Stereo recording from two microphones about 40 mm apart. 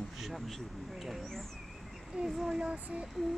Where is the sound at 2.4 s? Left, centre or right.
Centre.